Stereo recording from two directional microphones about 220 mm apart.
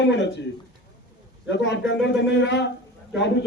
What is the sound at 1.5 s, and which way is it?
A man's voice, 55° left (ahead or behind).